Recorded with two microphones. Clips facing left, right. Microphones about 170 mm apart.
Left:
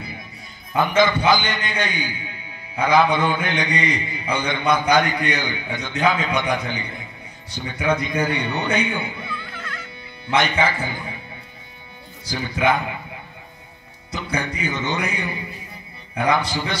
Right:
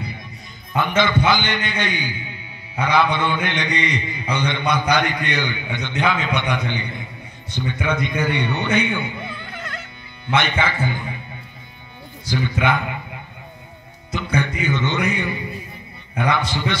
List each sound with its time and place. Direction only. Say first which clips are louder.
0.7 s a man's voice: left 1 dB; 40° left (ahead or behind)
10.3 s a man's voice: left 1 dB; 40° left (ahead or behind)
12.3 s a man's voice: even; 35° left (ahead or behind)
14.1 s a man's voice: right 3 dB; 40° left (ahead or behind)